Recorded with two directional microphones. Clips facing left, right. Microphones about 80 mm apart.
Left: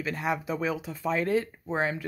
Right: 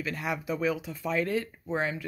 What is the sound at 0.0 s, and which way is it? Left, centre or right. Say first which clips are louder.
Speech: left 3 dB; left.